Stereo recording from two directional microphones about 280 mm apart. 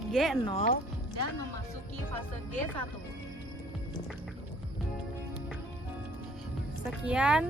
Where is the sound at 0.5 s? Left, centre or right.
Left.